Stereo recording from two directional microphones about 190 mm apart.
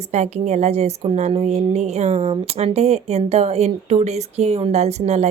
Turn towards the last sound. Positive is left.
turn(degrees=-35)  # may be behind; listen again after turning